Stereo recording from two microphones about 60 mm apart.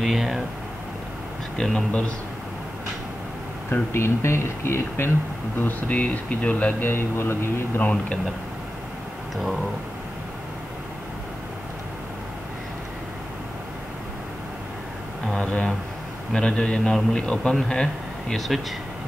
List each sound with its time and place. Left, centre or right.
0.0 s a sound: centre
1.6 s a man's voice: centre
1.9 s speech: centre
3.9 s speech: left
5.6 s speech: left
6.9 s speech: left
7.8 s speech: left
15.3 s a man's voice: centre
18.5 s speech: centre